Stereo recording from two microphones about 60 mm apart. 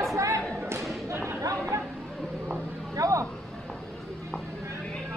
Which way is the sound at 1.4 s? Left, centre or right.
Right.